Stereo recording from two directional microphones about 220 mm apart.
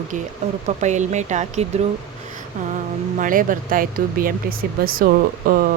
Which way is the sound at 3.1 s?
40° right (ahead or behind).